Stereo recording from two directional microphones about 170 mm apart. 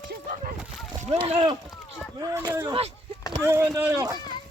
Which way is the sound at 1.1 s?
35° right (ahead or behind).